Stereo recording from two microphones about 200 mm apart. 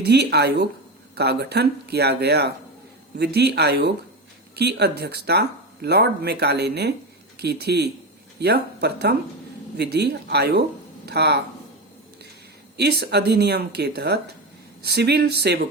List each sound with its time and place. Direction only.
0.0 s speech: 55° right (ahead or behind)
12.7 s speech: 55° right (ahead or behind)